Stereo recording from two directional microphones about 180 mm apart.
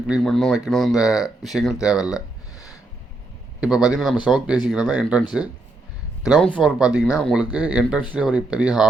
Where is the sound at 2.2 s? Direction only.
20° left (ahead or behind).